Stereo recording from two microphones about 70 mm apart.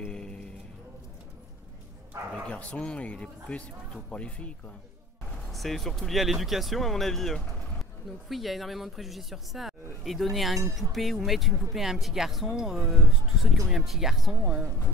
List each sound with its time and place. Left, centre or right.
0.0 s clip-clop: centre
2.4 s speech: centre
5.5 s speech: centre